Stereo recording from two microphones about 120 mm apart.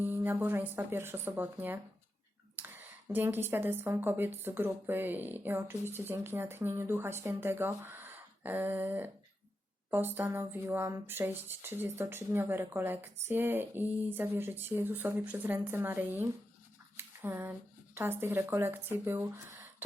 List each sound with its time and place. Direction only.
0.0 s speech: 15° right (ahead or behind)